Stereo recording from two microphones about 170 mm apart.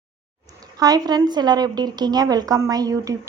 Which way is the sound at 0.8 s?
20° right (ahead or behind).